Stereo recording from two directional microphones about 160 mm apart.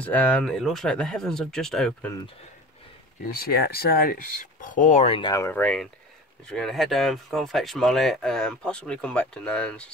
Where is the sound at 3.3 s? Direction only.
70° left (ahead or behind); by 5.1 s 50° left (ahead or behind).